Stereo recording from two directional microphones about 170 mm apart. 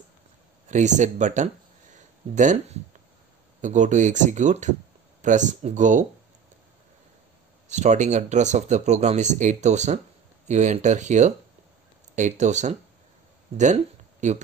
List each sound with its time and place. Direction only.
0.7 s speech: 45° right (ahead or behind)
7.6 s speech: 45° right (ahead or behind)
14.2 s speech: 45° right (ahead or behind)